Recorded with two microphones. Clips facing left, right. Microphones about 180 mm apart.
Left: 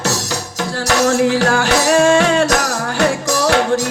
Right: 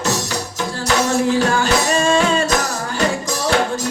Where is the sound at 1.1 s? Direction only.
80° left.